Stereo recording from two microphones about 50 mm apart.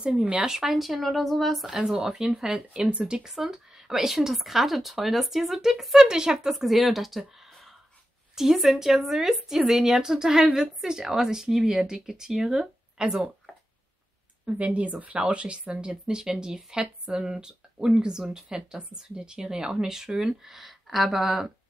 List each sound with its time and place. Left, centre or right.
0.5 s speech: centre
1.7 s a woman's voice: centre
2.8 s a woman's voice: right
6.5 s a woman's voice: centre
14.4 s a woman's voice: right; by 21.5 s centre